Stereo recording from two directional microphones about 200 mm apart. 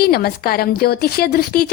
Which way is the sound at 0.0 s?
50° left (ahead or behind).